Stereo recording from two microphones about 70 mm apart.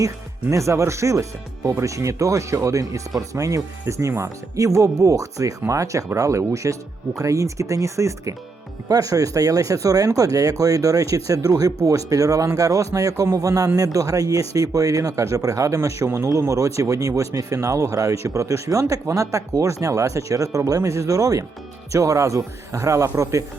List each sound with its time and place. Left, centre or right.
0.5 s speech: right